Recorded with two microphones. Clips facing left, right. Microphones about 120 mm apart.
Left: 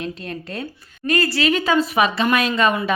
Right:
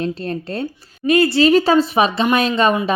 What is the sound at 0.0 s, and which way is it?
A woman's voice, 35° right (ahead or behind).